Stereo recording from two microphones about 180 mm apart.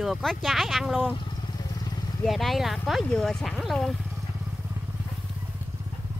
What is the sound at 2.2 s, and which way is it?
Speech, centre (ahead or behind).